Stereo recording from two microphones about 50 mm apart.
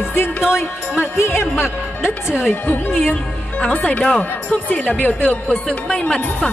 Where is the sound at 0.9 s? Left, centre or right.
Left.